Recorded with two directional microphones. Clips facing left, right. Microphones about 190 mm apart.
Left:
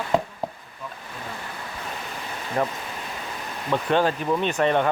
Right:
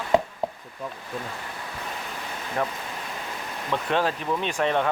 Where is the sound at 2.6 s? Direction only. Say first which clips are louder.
Left 3 dB; 10° left (ahead or behind).